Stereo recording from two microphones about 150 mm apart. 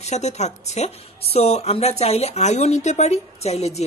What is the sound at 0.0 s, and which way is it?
A woman's voice, 50° left (ahead or behind).